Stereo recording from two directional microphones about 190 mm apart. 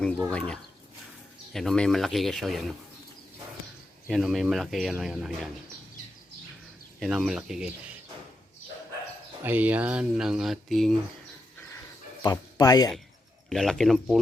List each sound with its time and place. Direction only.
0.3 s speech: 5° left (ahead or behind)
4.1 s speech: centre (ahead or behind)
7.0 s speech: centre (ahead or behind)
9.4 s speech: 10° right (ahead or behind)
12.2 s speech: 20° left (ahead or behind)
13.5 s speech: centre (ahead or behind)